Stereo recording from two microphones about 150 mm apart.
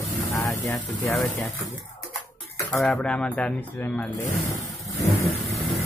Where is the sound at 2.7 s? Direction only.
Centre (ahead or behind).